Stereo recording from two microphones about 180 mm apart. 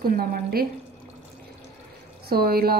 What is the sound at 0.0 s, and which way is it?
Speech, 55° right (ahead or behind).